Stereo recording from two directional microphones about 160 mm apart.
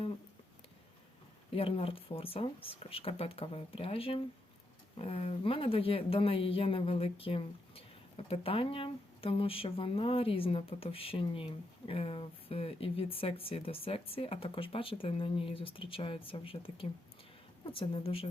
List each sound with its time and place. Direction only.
1.5 s speech: 35° left (ahead or behind)